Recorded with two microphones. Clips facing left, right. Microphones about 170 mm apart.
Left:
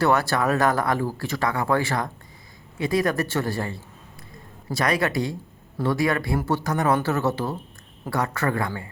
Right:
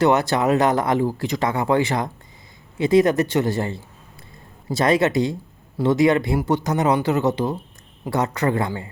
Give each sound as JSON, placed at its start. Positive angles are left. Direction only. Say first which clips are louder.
{"t": 0.0, "sound": "speech", "louder": "right 3 dB", "side_deg": -20}